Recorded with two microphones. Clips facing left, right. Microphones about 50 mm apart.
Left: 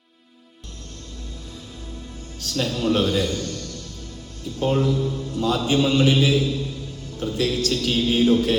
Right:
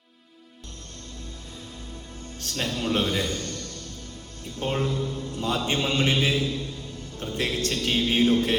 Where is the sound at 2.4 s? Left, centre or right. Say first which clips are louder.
Left 5 dB; right.